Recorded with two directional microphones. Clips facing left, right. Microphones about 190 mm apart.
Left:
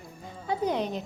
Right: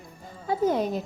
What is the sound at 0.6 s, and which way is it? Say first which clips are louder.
Speech: right 5 dB; 45° right (ahead or behind).